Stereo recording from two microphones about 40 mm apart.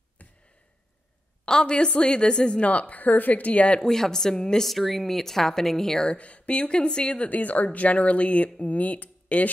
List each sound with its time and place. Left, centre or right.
0.2 s a sound: left
1.5 s a woman's voice: left
2.6 s speech: left
3.8 s a woman's voice: centre
4.6 s a woman's voice: centre
6.0 s speech: left
7.2 s speech: left